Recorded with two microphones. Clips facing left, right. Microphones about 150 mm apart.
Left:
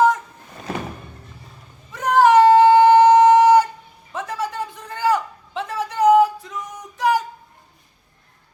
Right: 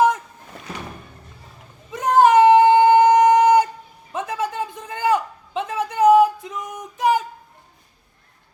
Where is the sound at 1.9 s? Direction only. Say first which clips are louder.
Even; 20° right (ahead or behind).